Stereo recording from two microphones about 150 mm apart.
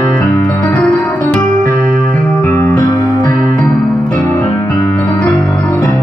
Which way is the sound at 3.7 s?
5° left (ahead or behind).